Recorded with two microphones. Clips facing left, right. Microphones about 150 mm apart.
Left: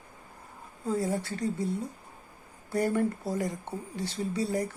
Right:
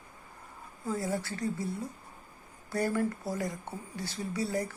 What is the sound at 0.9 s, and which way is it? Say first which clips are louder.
Speech: left 3 dB; 20° left (ahead or behind).